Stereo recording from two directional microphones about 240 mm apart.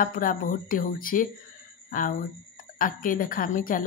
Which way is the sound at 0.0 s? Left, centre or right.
Left.